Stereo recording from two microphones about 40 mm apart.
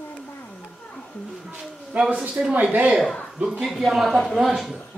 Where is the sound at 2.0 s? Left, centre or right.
Right.